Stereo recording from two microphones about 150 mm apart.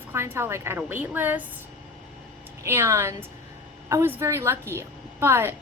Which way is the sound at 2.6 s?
15° right (ahead or behind).